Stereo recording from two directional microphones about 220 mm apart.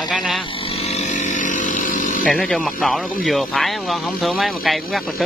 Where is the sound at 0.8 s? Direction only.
30° left (ahead or behind).